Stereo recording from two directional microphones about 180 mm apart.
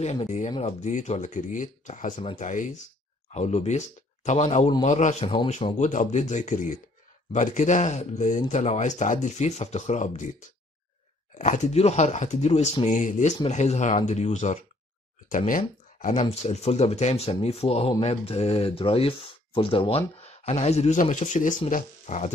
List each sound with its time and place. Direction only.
0.0 s speech: 40° left (ahead or behind)
5.8 s speech: 40° left (ahead or behind)
11.3 s speech: 40° left (ahead or behind)